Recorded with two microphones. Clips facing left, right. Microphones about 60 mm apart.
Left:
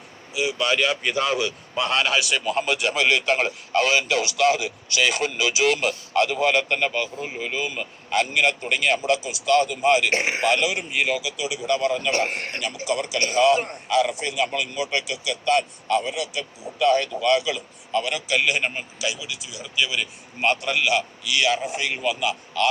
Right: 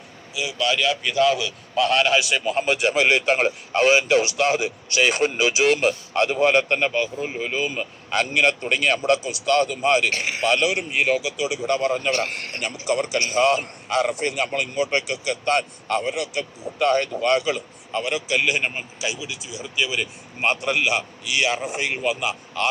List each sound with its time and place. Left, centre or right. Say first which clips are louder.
0.3 s speech: left 1 dB; left
1.7 s a man's voice: right 5 dB; centre
2.0 s a man's voice: right 2 dB; centre
2.4 s speech: right 1 dB; centre
2.6 s a man's voice: right 4 dB; right
10.1 s speech: left 3 dB; left
10.8 s speech: right 3 dB; right
12.1 s speech: left 1 dB; left
12.8 s a man's voice: right 2 dB; right
17.9 s a man's voice: even; right
18.9 s a man's voice: even; right